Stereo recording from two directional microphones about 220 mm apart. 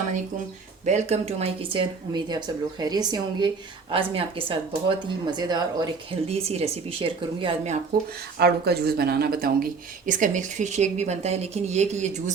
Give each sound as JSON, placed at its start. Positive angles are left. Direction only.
{"t": 0.9, "sound": "speech", "side_deg": -30}
{"t": 8.4, "sound": "speech", "side_deg": -45}